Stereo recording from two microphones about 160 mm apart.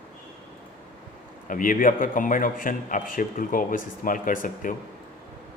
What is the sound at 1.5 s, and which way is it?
A man's voice, 60° left (ahead or behind).